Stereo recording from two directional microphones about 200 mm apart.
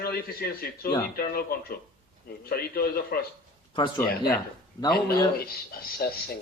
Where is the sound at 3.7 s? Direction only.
25° left (ahead or behind).